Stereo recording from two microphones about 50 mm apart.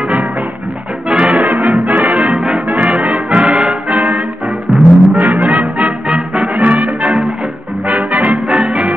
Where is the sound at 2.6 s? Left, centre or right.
Right.